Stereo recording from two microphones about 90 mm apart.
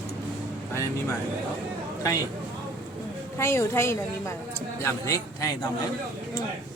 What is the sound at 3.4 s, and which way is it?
Speech, 30° left (ahead or behind).